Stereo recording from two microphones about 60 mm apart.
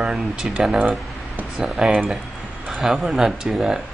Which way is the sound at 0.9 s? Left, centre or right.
Right.